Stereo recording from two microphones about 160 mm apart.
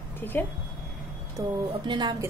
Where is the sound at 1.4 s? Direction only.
30° right (ahead or behind).